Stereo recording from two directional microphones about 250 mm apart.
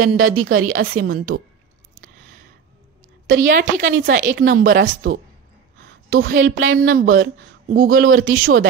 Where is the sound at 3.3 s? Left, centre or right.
Right.